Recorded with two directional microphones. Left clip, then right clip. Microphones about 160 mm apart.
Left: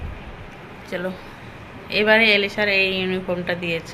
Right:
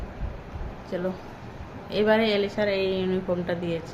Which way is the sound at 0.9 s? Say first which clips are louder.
Left 3 dB; 10° right (ahead or behind).